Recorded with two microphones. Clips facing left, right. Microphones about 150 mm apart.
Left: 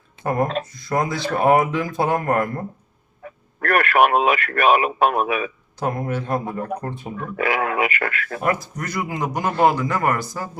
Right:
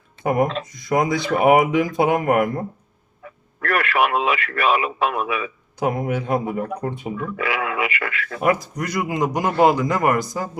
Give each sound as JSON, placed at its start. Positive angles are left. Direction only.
{"t": 0.7, "sound": "speech", "side_deg": -15}
{"t": 3.6, "sound": "speech", "side_deg": 50}
{"t": 5.8, "sound": "speech", "side_deg": -15}
{"t": 7.3, "sound": "speech", "side_deg": 50}
{"t": 8.4, "sound": "speech", "side_deg": -15}